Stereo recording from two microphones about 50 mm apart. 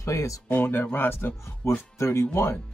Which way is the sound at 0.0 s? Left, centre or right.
Left.